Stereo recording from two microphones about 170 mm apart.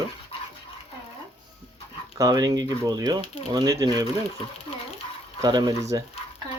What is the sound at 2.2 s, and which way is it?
Speech, 20° right (ahead or behind).